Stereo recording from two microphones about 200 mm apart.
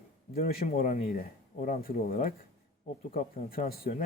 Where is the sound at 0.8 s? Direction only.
45° left (ahead or behind).